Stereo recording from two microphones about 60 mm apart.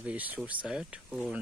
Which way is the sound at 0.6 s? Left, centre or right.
Centre.